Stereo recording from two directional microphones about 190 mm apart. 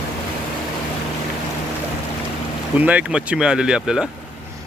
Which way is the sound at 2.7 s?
10° right (ahead or behind).